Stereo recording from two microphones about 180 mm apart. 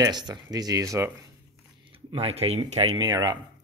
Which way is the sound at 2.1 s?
35° right (ahead or behind).